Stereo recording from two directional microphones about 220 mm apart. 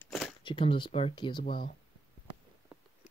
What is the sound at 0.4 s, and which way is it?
Speech, 20° left (ahead or behind).